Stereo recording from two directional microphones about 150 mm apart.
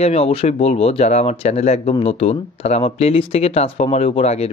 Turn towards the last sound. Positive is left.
turn(degrees=45)  # may be behind; listen again after turning